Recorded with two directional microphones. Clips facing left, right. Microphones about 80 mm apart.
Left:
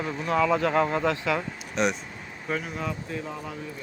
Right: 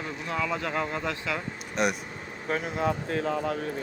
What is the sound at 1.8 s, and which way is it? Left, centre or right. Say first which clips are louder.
Speech: left 1 dB; centre.